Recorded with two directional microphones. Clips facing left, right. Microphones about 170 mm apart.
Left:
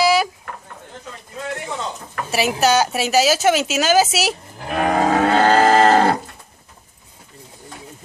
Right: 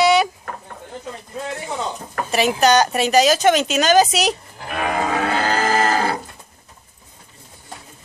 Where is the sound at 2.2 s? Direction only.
5° left (ahead or behind).